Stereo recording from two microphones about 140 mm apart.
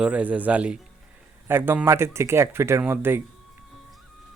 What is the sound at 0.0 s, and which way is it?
Speech, 10° right (ahead or behind).